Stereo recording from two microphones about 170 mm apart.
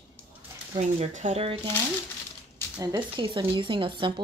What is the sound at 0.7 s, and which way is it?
Speech, 40° right (ahead or behind).